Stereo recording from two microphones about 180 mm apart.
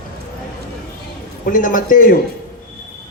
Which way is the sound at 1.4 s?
50° left (ahead or behind).